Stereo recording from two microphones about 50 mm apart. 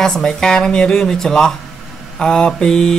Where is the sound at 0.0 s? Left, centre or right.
Centre.